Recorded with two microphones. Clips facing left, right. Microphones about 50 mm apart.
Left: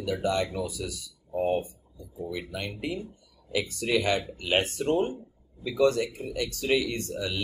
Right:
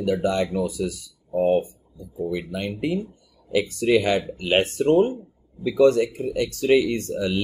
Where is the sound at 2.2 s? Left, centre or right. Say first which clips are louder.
Right 7 dB; right.